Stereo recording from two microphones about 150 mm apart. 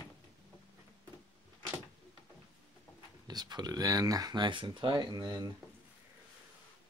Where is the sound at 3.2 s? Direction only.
25° right (ahead or behind).